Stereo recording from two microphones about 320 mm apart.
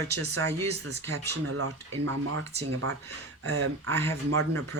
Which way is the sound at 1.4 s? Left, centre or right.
Right.